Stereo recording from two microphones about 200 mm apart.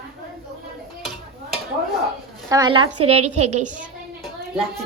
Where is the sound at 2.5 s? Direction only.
20° right (ahead or behind).